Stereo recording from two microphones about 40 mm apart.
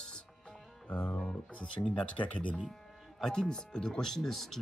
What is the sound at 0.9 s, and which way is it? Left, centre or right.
Speech, left.